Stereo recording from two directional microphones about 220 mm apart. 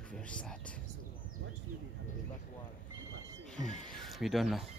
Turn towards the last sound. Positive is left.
turn(degrees=0)  # may be behind; listen again after turning